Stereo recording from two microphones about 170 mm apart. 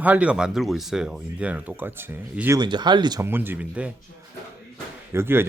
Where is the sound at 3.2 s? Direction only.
10° right (ahead or behind).